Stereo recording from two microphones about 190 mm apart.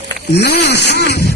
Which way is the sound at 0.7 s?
60° left (ahead or behind).